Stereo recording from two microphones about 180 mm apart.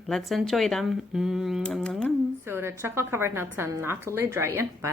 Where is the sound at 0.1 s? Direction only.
Centre (ahead or behind).